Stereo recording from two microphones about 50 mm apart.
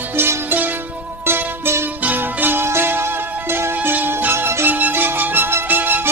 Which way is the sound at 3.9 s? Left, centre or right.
Right.